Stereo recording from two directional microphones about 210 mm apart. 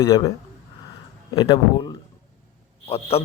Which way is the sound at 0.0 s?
15° left (ahead or behind).